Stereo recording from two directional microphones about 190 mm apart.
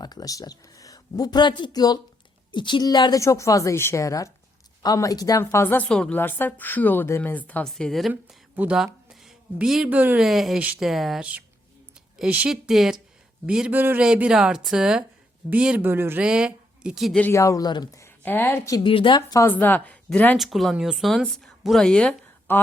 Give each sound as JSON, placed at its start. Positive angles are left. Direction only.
{"t": 0.0, "sound": "a woman's voice", "side_deg": 20}